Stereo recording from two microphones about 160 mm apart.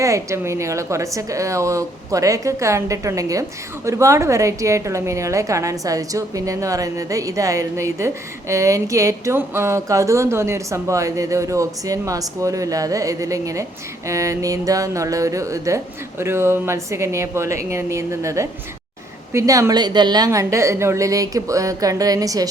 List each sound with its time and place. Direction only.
0.0 s a woman's voice: 20° right (ahead or behind)